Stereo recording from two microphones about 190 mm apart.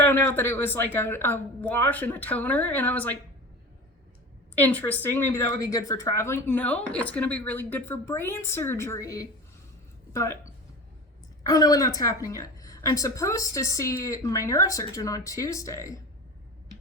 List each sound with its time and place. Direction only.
0.0 s a woman's voice: 10° left (ahead or behind)
4.5 s a woman's voice: 10° left (ahead or behind)
11.4 s a woman's voice: 20° left (ahead or behind)